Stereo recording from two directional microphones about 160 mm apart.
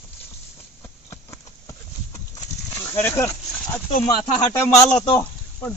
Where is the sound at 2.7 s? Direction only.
15° left (ahead or behind).